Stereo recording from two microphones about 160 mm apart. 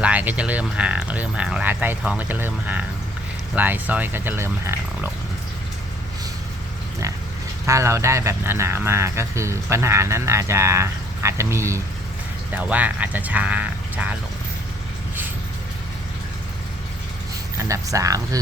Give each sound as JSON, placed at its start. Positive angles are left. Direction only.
{"t": 0.0, "sound": "speech", "side_deg": -10}
{"t": 7.7, "sound": "speech", "side_deg": -20}
{"t": 17.6, "sound": "speech", "side_deg": -20}